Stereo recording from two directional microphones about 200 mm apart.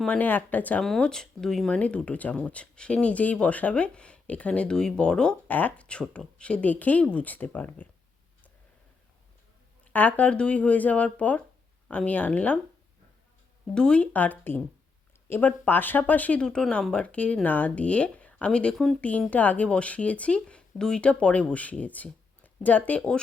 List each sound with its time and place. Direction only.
0.0 s speech: 5° left (ahead or behind)
9.8 s speech: 10° left (ahead or behind)
13.7 s speech: 5° left (ahead or behind)